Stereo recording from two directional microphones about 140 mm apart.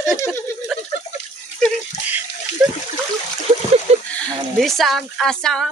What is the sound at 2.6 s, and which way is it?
Splash, 5° right (ahead or behind).